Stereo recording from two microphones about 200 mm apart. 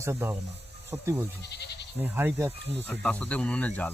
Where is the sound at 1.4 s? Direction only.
55° left (ahead or behind).